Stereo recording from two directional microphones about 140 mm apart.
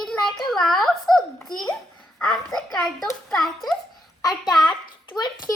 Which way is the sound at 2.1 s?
5° left (ahead or behind).